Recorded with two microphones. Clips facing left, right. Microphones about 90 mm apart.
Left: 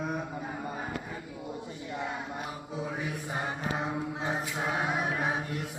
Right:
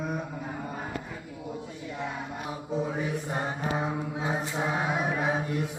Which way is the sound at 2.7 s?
Centre (ahead or behind).